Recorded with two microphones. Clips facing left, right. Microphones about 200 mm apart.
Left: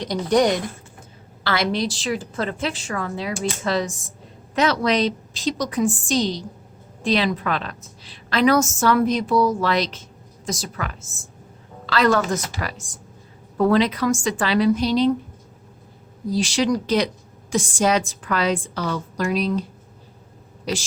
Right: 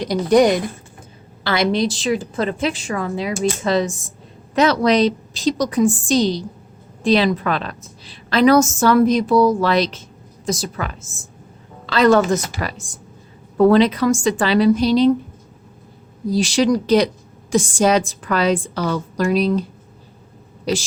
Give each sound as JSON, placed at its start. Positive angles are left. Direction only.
{"t": 0.0, "sound": "a woman's voice", "side_deg": -10}
{"t": 4.5, "sound": "a woman's voice", "side_deg": -35}
{"t": 9.3, "sound": "speech", "side_deg": -75}
{"t": 9.6, "sound": "a woman's voice", "side_deg": -30}
{"t": 16.3, "sound": "a woman's voice", "side_deg": -40}